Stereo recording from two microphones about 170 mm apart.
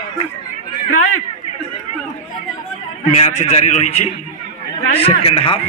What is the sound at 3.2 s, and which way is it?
A man's voice, 40° left (ahead or behind).